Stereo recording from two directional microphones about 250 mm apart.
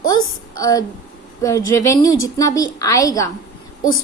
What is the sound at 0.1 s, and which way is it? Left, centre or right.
A woman's voice, centre.